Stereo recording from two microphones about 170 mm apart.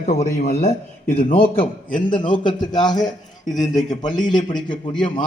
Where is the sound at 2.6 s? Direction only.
25° left (ahead or behind).